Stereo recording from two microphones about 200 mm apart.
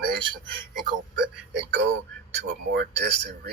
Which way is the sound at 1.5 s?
60° right (ahead or behind).